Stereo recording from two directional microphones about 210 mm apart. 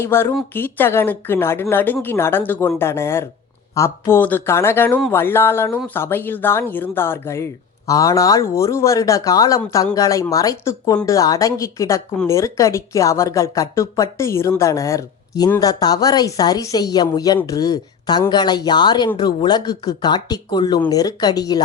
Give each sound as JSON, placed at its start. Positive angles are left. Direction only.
{"t": 0.0, "sound": "speech", "side_deg": 10}
{"t": 12.1, "sound": "speech", "side_deg": 5}
{"t": 12.4, "sound": "speech", "side_deg": 15}